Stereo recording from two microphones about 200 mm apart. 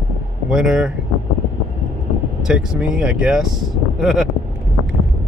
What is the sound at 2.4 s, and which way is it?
Speech, 5° right (ahead or behind).